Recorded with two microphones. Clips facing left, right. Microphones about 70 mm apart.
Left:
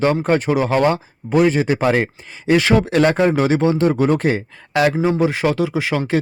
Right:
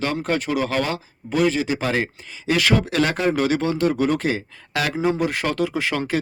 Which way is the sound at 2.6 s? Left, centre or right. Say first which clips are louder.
Left 3 dB; left.